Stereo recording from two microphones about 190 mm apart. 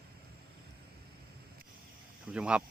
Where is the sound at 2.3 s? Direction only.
5° right (ahead or behind).